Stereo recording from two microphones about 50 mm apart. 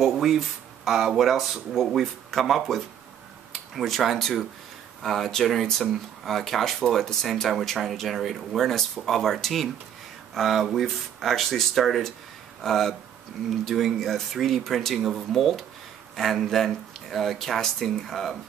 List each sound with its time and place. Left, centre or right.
0.0 s speech: centre